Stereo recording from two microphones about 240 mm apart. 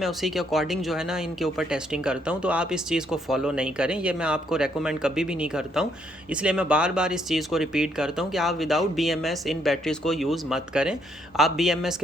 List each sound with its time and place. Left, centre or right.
0.0 s speech: centre